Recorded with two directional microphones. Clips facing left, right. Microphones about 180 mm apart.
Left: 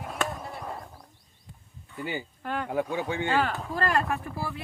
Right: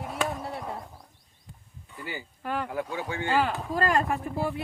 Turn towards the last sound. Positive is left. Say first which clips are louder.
# right 4 dB
turn(degrees=-20)  # may be behind; listen again after turning